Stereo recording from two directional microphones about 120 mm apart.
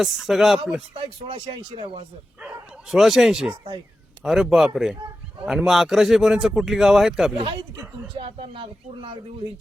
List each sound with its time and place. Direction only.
0.0 s a man's voice: centre (ahead or behind)
0.9 s speech: 50° right (ahead or behind)
2.9 s a man's voice: centre (ahead or behind)
8.1 s speech: 50° right (ahead or behind)